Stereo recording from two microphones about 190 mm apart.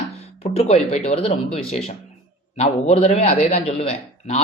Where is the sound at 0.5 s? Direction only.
35° left (ahead or behind).